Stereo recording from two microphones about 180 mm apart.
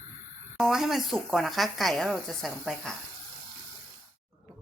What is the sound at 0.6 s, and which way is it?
Speech, centre (ahead or behind).